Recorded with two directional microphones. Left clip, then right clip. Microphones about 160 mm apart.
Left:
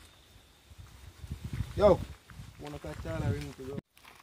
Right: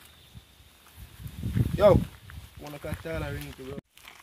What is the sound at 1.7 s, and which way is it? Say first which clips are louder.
Speech: right 4 dB; 20° right (ahead or behind).